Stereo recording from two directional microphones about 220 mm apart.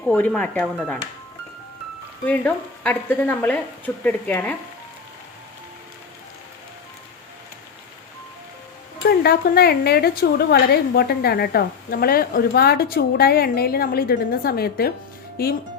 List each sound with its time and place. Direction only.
0.0 s speech: 5° left (ahead or behind)
2.2 s speech: 5° left (ahead or behind)
9.0 s speech: 45° left (ahead or behind)